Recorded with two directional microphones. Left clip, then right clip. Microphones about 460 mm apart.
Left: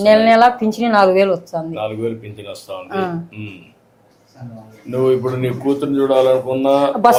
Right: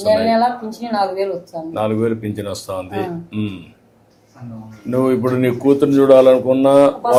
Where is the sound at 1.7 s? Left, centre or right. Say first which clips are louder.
Right 8 dB; right.